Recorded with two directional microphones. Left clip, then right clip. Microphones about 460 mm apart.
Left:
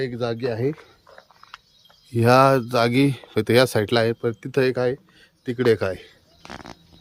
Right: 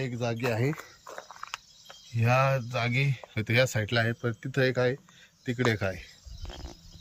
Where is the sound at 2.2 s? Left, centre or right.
Centre.